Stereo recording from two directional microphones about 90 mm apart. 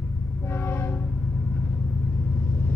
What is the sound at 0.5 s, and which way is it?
Train, 20° left (ahead or behind).